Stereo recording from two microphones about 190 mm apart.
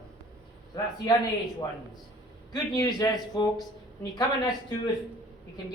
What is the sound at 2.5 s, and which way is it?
A man's voice, 20° left (ahead or behind).